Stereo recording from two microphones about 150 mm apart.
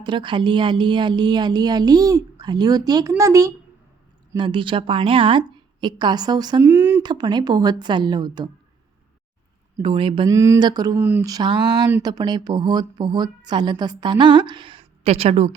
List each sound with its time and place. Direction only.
0.0 s a woman's voice: 30° right (ahead or behind)
4.4 s a woman's voice: 35° right (ahead or behind)
6.6 s a sound: 15° right (ahead or behind)
7.0 s a woman's voice: 30° right (ahead or behind)
9.8 s a woman's voice: 35° right (ahead or behind)
10.2 s a woman's voice: 20° right (ahead or behind)
10.9 s speech: 15° right (ahead or behind)
11.3 s a woman's voice: 30° right (ahead or behind); by 15.5 s 45° right (ahead or behind)